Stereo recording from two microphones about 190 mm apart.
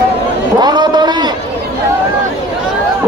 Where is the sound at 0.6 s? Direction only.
20° right (ahead or behind).